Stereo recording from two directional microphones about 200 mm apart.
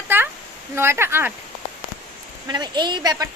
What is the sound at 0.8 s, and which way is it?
Speech, 10° right (ahead or behind).